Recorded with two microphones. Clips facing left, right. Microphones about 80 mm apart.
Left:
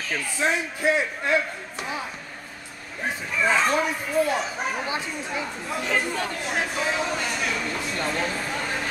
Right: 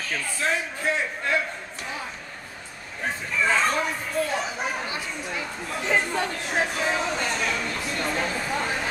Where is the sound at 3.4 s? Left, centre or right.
Centre.